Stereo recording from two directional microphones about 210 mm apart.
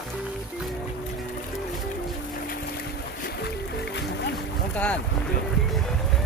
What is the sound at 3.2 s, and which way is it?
Music, 50° left (ahead or behind).